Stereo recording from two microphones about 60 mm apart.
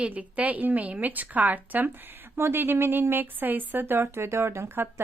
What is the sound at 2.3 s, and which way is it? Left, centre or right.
A woman's voice, right.